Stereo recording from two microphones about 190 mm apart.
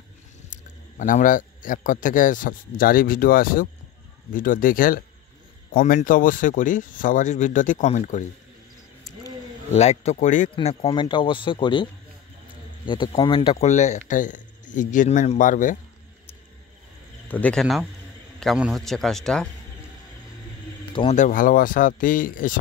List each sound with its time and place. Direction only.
0.9 s a man's voice: 45° left (ahead or behind)
9.7 s speech: 35° left (ahead or behind)
13.7 s a man's voice: 35° left (ahead or behind)
17.3 s a man's voice: 5° left (ahead or behind)
21.1 s a man's voice: 45° left (ahead or behind)